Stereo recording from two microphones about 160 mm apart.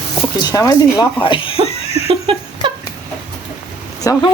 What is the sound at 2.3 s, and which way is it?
Speech, 30° right (ahead or behind).